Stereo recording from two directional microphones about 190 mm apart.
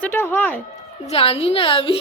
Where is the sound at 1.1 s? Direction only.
30° left (ahead or behind).